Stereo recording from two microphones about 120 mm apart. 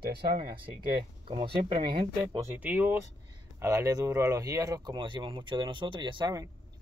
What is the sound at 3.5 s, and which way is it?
Speech, 25° right (ahead or behind).